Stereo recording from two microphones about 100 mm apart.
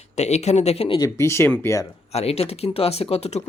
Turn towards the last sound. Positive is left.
turn(degrees=90)